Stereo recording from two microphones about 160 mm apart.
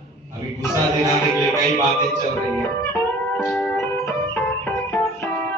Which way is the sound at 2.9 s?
10° left (ahead or behind).